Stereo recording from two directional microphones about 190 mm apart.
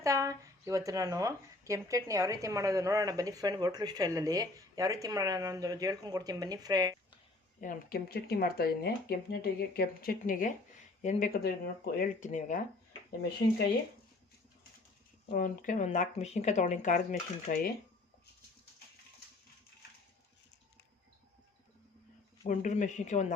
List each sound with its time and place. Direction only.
0.0 s speech: 15° right (ahead or behind)
7.6 s speech: 50° left (ahead or behind)
11.4 s speech: 50° left (ahead or behind)
15.3 s speech: 45° left (ahead or behind)
22.4 s speech: 40° left (ahead or behind)